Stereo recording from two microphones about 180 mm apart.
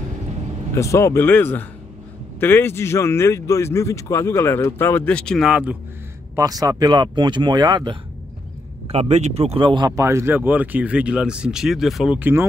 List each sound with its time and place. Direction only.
0.7 s speech: 15° left (ahead or behind); by 5.8 s 5° right (ahead or behind)
6.3 s speech: 20° right (ahead or behind)
8.8 s speech: 35° right (ahead or behind); by 12.4 s 10° right (ahead or behind)